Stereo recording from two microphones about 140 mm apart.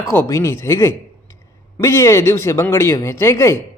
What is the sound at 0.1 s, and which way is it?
A man's voice, 20° left (ahead or behind).